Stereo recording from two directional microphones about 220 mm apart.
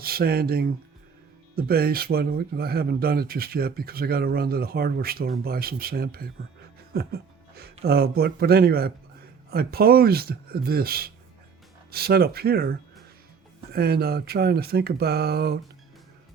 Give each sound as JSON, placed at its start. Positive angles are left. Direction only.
{"t": 0.0, "sound": "speech", "side_deg": -45}
{"t": 6.9, "sound": "music", "side_deg": -45}
{"t": 7.9, "sound": "speech", "side_deg": -45}
{"t": 13.7, "sound": "speech", "side_deg": -45}